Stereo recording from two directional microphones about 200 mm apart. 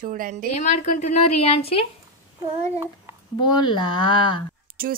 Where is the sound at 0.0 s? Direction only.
40° right (ahead or behind).